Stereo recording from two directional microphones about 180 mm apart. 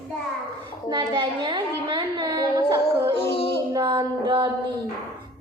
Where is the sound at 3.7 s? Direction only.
25° right (ahead or behind).